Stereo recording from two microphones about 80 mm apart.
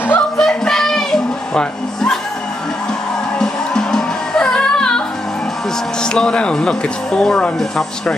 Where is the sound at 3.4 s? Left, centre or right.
Centre.